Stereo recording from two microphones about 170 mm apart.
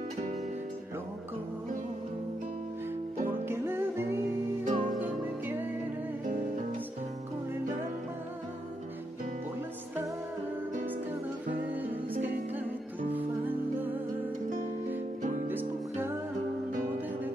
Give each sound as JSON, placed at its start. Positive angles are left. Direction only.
{"t": 3.4, "sound": "music", "side_deg": -15}
{"t": 4.6, "sound": "music", "side_deg": -50}
{"t": 13.1, "sound": "music", "side_deg": -10}
{"t": 15.4, "sound": "music", "side_deg": -10}